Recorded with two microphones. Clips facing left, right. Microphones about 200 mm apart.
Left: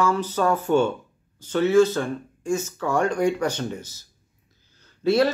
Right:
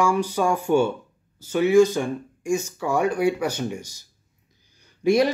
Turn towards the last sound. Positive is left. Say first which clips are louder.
# right 1 dB
turn(degrees=-15)  # may be behind; listen again after turning